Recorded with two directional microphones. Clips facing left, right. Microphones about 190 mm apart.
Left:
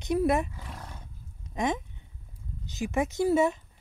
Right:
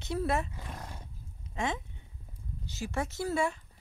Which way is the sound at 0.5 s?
20° right (ahead or behind).